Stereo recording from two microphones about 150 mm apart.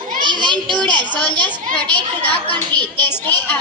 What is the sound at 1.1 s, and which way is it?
A child's voice, 10° left (ahead or behind).